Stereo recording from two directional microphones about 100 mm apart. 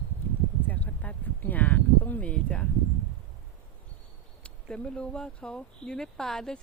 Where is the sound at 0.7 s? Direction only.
15° left (ahead or behind).